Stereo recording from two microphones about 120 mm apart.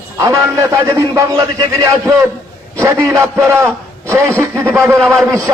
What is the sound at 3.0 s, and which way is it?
A man's voice, 25° right (ahead or behind).